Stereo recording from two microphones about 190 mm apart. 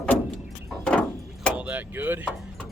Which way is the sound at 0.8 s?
5° left (ahead or behind).